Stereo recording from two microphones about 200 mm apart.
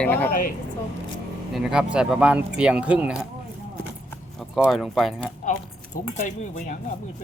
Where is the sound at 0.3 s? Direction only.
45° left (ahead or behind).